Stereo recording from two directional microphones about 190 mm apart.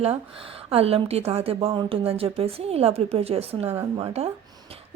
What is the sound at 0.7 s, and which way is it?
A woman's voice, 30° right (ahead or behind).